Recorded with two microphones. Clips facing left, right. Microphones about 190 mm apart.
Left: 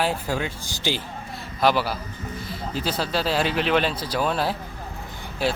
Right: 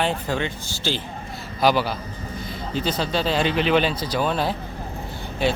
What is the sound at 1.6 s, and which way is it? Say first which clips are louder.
Speech: right 1 dB; centre (ahead or behind).